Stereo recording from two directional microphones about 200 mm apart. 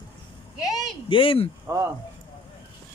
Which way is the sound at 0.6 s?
20° left (ahead or behind).